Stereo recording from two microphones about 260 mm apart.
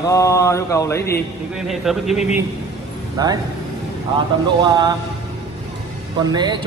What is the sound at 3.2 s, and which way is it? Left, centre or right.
Speech, centre.